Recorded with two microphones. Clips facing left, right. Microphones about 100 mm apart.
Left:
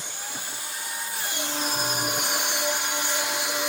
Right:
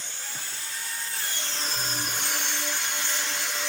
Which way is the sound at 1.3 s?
15° left (ahead or behind).